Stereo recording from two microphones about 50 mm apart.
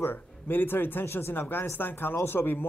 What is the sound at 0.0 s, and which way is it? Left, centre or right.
Speech, left.